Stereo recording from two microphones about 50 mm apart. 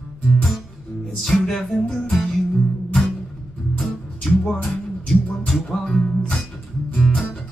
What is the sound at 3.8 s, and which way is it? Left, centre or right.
Music, centre.